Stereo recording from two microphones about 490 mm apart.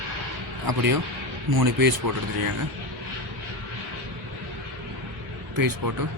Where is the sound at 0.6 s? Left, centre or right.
Right.